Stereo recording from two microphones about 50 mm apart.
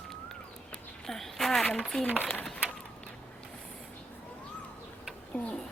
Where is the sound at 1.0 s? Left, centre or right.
Centre.